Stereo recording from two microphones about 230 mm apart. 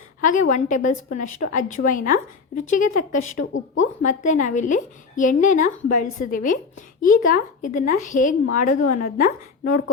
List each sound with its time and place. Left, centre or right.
0.2 s speech: left